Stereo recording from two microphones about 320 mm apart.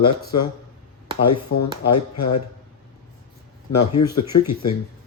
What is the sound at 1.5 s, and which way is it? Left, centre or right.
Speech, left.